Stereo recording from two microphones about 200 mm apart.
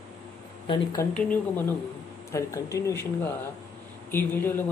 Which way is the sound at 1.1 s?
5° left (ahead or behind).